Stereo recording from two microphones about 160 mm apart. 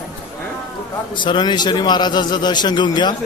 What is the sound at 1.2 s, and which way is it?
A man's voice, 30° left (ahead or behind).